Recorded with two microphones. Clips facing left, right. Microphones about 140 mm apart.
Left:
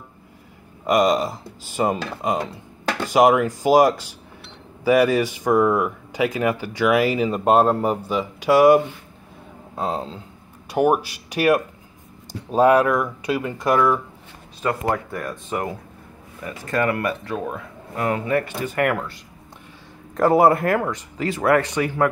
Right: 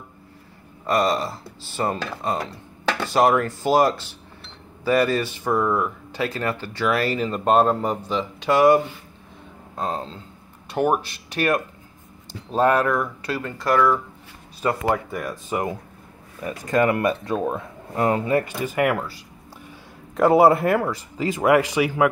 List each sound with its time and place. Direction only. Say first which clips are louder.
0.8 s speech: left 3 dB; 15° left (ahead or behind)
14.6 s speech: right 1 dB; 5° right (ahead or behind)
16.4 s speech: right 2 dB; 20° right (ahead or behind)
18.8 s speech: even; 10° right (ahead or behind)
20.2 s speech: right 1 dB; 5° right (ahead or behind)